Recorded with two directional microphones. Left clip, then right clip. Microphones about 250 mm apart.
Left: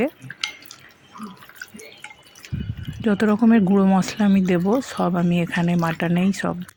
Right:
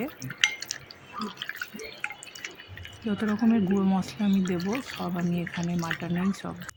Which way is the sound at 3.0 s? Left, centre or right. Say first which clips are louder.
Left 9 dB; left.